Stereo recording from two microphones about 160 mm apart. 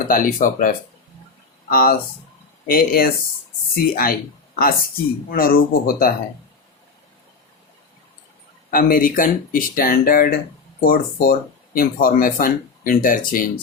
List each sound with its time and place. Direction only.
0.1 s speech: 60° left (ahead or behind)
8.7 s speech: 60° left (ahead or behind)